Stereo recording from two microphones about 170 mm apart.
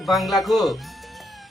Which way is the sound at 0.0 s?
Centre (ahead or behind).